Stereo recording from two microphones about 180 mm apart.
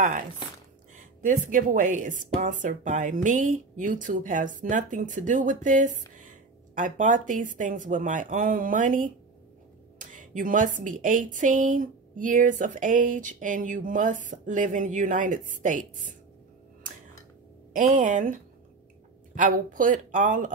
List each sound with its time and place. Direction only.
0.9 s a woman's voice: 45° right (ahead or behind)
17.7 s a woman's voice: 45° right (ahead or behind)